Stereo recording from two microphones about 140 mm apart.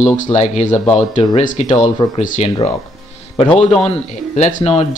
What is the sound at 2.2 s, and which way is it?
Speech, 65° left (ahead or behind).